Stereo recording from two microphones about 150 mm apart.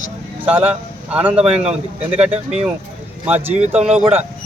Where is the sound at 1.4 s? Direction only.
45° right (ahead or behind).